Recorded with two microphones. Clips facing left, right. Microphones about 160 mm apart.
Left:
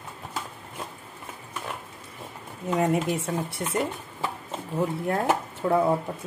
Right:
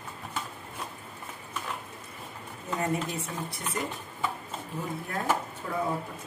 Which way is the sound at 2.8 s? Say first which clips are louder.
Left 6 dB; 75° left (ahead or behind).